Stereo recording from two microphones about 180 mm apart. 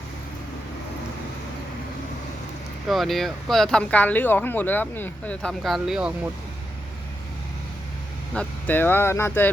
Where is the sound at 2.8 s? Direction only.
Centre (ahead or behind).